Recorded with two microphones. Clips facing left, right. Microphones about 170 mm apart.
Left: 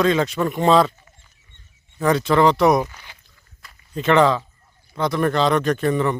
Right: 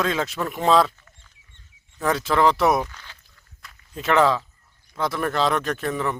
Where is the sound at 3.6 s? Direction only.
Centre (ahead or behind).